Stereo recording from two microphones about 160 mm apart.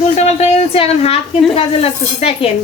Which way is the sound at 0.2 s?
45° left (ahead or behind).